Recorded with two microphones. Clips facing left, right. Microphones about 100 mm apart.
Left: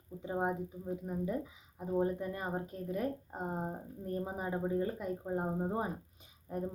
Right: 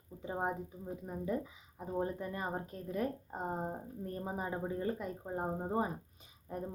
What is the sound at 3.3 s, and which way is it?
Speech, 15° right (ahead or behind).